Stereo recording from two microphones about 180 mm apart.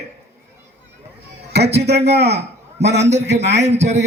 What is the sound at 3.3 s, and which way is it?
Speech, 70° right (ahead or behind).